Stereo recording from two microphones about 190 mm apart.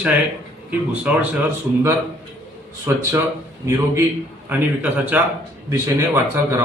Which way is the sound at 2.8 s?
15° right (ahead or behind).